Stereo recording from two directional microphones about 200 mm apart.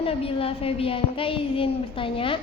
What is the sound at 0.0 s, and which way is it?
A woman's voice, 30° left (ahead or behind).